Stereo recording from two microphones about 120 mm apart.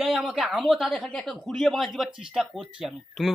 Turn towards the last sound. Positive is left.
turn(degrees=0)  # may be behind; listen again after turning